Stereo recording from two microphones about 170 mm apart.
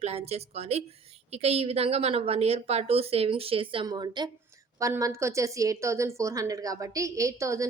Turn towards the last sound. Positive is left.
turn(degrees=-20)  # may be behind; listen again after turning